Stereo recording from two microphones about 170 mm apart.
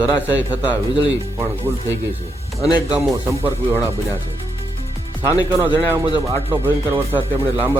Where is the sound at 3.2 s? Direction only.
15° right (ahead or behind).